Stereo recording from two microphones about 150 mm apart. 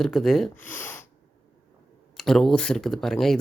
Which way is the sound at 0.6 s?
10° left (ahead or behind).